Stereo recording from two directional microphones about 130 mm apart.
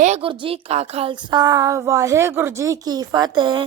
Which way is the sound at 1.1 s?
35° right (ahead or behind).